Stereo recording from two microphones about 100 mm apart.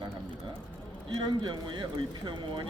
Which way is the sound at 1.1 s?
45° right (ahead or behind).